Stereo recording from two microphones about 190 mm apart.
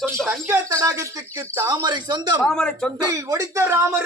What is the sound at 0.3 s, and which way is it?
Speech, 10° right (ahead or behind).